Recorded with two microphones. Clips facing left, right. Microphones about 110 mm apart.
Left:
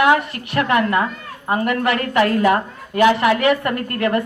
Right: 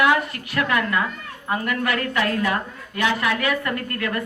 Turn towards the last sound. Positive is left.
turn(degrees=30)  # may be behind; listen again after turning